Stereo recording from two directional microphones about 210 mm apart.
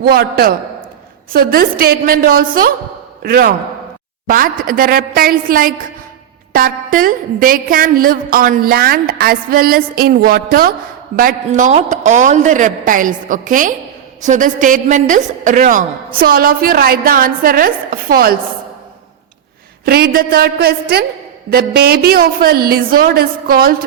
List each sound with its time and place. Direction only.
0.0 s a woman's voice: 45° right (ahead or behind)
19.8 s a woman's voice: 50° right (ahead or behind)